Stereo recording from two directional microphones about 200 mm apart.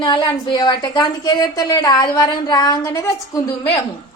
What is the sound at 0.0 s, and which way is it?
A woman's voice, 25° left (ahead or behind).